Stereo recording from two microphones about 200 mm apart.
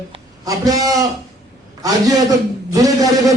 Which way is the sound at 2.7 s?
15° right (ahead or behind).